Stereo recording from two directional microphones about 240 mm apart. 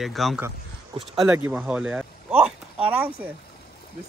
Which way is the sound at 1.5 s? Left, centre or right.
Centre.